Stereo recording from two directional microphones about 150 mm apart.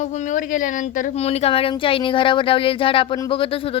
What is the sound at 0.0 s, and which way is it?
Speech, 50° left (ahead or behind).